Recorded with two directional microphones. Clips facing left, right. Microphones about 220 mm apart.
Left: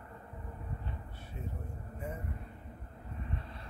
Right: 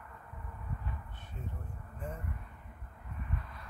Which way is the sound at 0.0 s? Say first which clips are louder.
Left 3 dB; 30° left (ahead or behind).